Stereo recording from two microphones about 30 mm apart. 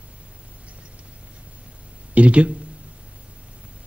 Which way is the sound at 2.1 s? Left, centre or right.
Right.